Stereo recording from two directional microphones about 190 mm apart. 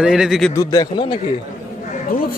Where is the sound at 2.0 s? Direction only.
50° left (ahead or behind).